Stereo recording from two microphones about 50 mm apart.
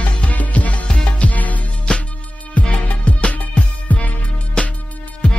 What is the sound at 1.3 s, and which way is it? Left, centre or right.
Music, left.